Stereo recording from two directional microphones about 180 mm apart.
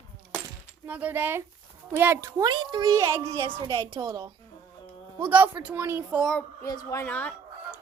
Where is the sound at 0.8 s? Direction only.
10° right (ahead or behind).